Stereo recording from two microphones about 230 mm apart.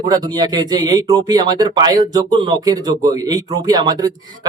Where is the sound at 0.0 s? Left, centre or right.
Centre.